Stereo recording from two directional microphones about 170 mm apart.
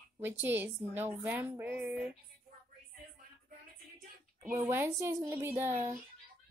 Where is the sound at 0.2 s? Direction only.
10° right (ahead or behind).